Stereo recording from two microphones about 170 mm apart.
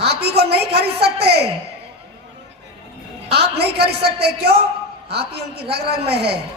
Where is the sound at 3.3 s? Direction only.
70° right (ahead or behind).